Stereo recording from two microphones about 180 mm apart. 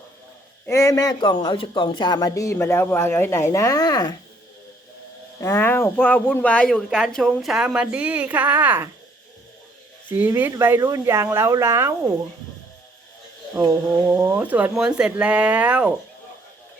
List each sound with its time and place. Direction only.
0.6 s speech: 15° left (ahead or behind)
5.4 s speech: 15° left (ahead or behind); by 8.9 s 10° right (ahead or behind)
10.1 s speech: 10° right (ahead or behind)
14.1 s speech: 10° right (ahead or behind)